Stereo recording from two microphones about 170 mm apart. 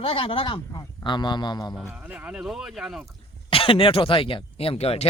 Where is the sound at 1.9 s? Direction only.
10° right (ahead or behind).